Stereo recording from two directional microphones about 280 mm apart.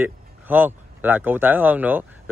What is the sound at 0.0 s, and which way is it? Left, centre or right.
Speech, centre.